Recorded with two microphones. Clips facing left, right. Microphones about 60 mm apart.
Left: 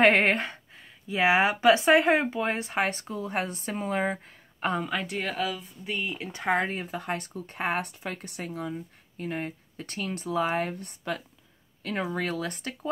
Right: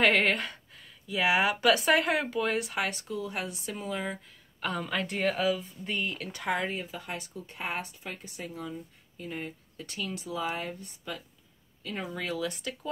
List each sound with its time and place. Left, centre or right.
0.0 s speech: left
4.6 s speech: left
4.8 s speech: centre
6.1 s speech: left